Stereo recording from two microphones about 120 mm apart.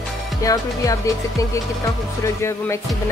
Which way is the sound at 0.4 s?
30° left (ahead or behind).